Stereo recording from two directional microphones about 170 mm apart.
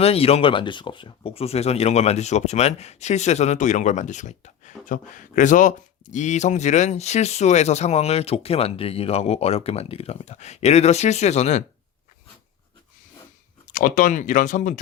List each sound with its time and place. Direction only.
0.0 s speech: 35° left (ahead or behind)
13.7 s speech: 50° left (ahead or behind)